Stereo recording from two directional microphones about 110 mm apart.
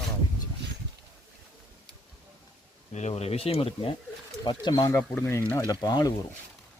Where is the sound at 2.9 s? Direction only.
85° left; by 3.9 s 60° left (ahead or behind).